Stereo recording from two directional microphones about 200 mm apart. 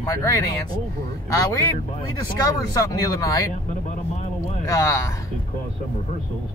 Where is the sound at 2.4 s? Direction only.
15° left (ahead or behind).